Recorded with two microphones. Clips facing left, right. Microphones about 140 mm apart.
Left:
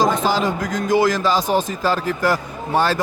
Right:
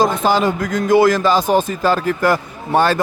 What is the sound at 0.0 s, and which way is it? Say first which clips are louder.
A man's voice: right 3 dB; 55° right (ahead or behind).